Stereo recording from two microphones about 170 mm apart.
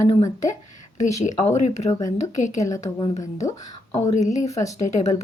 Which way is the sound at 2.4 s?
45° left (ahead or behind).